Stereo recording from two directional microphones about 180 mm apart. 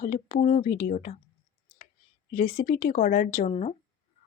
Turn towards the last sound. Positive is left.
turn(degrees=35)  # may be behind; listen again after turning